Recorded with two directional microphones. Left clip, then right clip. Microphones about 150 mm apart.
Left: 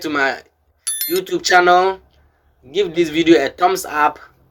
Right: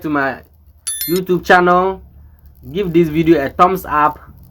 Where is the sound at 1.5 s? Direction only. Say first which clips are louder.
Left 4 dB; 30° left (ahead or behind); by 3.4 s 15° left (ahead or behind).